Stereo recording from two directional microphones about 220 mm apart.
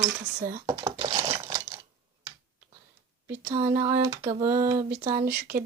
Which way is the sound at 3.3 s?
10° right (ahead or behind).